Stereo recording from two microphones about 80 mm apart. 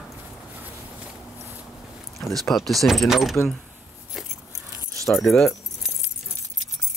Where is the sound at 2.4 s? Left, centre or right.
Centre.